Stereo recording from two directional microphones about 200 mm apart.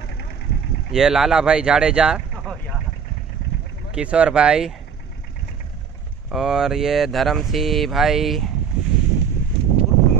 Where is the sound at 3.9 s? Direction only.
5° right (ahead or behind).